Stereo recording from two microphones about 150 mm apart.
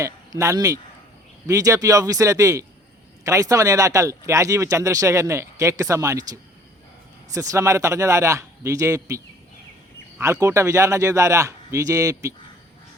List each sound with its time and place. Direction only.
0.0 s speech: 20° right (ahead or behind)
10.4 s speech: 20° right (ahead or behind)